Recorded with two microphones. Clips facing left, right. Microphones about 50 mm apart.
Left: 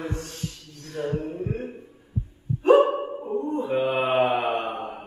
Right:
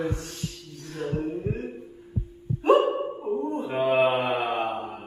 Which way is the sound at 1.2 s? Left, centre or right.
Left.